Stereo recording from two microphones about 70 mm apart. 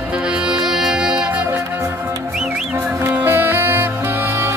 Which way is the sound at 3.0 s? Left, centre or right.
Right.